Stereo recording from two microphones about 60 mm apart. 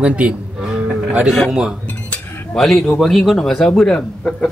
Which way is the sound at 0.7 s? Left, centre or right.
Centre.